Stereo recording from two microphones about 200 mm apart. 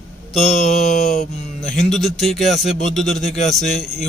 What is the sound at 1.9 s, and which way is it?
Speech, centre (ahead or behind).